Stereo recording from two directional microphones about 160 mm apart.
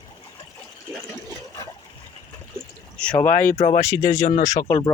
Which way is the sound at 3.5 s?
45° left (ahead or behind).